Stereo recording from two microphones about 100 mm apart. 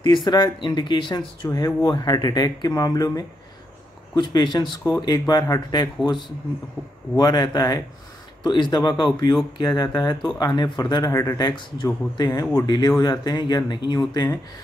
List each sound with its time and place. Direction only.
0.0 s speech: 45° left (ahead or behind)
7.2 s speech: 45° left (ahead or behind)
11.1 s speech: 35° left (ahead or behind)
11.4 s speech: 50° left (ahead or behind)
12.3 s speech: 40° left (ahead or behind)